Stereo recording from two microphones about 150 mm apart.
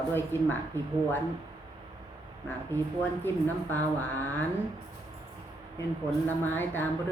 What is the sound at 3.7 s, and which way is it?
Speech, 10° left (ahead or behind).